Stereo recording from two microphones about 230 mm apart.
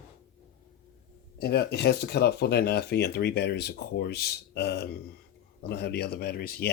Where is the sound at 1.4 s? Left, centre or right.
Left.